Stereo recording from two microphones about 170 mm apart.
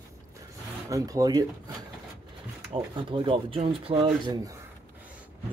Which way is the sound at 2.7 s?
30° right (ahead or behind).